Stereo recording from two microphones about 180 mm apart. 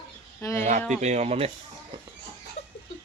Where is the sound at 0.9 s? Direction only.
40° right (ahead or behind).